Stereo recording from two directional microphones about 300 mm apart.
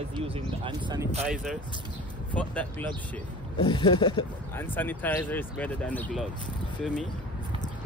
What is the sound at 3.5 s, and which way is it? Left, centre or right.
Speech, centre.